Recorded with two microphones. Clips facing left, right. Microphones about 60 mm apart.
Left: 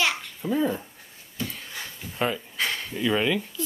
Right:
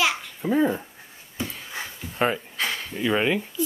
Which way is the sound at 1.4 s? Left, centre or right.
Centre.